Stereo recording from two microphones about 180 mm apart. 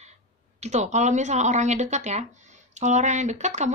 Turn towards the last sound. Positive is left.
turn(degrees=-40)  # may be behind; listen again after turning